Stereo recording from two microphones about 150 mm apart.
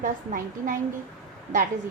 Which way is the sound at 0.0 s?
65° right (ahead or behind).